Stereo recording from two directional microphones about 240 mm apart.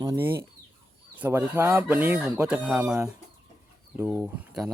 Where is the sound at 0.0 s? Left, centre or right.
Centre.